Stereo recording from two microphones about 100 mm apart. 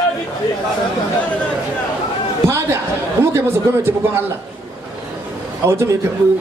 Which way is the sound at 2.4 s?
25° right (ahead or behind).